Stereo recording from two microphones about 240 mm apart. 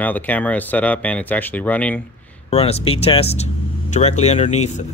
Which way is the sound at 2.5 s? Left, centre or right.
Left.